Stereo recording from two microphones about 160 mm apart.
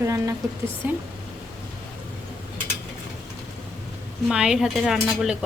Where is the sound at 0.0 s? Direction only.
20° right (ahead or behind).